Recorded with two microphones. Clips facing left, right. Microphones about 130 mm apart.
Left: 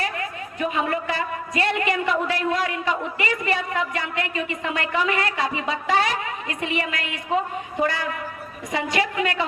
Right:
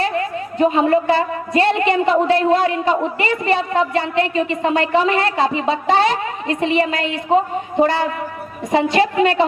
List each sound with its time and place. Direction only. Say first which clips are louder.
0.0 s a woman's voice: right 8 dB; 30° right (ahead or behind)